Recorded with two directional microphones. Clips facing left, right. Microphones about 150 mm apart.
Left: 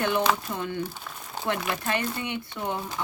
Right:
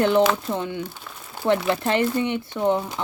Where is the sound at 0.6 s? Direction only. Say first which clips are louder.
Right 3 dB; 15° right (ahead or behind).